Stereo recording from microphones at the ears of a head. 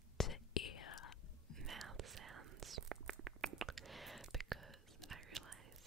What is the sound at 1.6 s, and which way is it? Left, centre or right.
Whispering, right.